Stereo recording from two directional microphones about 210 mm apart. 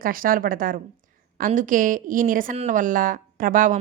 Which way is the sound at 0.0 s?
40° right (ahead or behind).